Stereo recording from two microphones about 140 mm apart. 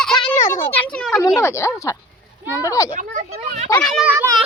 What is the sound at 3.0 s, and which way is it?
Speech, 65° right (ahead or behind).